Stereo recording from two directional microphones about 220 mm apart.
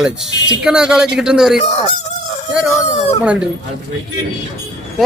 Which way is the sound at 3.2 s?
5° right (ahead or behind).